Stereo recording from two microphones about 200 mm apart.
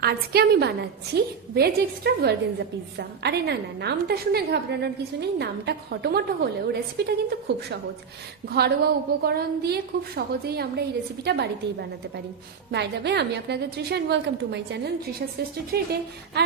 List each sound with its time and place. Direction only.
0.0 s a woman's voice: 50° right (ahead or behind)